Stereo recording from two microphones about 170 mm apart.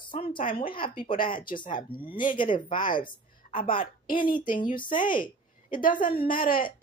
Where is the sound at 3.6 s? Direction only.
30° left (ahead or behind).